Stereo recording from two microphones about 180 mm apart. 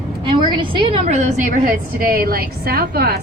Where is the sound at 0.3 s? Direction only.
25° right (ahead or behind).